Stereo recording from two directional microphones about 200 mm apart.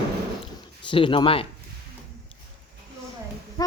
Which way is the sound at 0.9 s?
25° left (ahead or behind).